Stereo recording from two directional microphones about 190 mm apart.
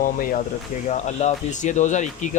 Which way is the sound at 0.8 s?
35° left (ahead or behind).